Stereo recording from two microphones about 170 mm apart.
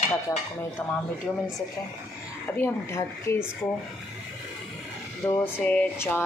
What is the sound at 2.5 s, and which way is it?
Speech, 15° left (ahead or behind).